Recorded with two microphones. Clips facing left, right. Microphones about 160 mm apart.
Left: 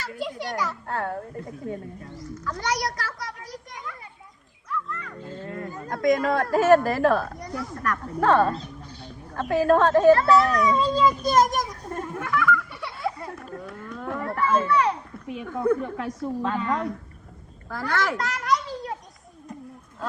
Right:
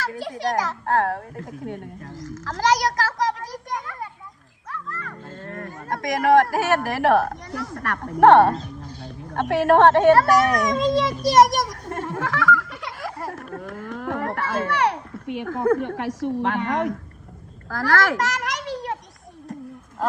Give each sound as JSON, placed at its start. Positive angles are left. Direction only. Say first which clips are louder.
{"t": 0.0, "sound": "a child's voice", "louder": "right 5 dB", "side_deg": -90}
{"t": 5.6, "sound": "speech", "louder": "left 6 dB", "side_deg": -85}
{"t": 7.8, "sound": "speech", "louder": "right 9 dB", "side_deg": -70}
{"t": 17.7, "sound": "a sound", "louder": "right 5 dB", "side_deg": -90}